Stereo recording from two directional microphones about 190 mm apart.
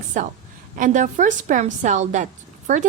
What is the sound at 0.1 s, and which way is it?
A woman's voice, 40° right (ahead or behind).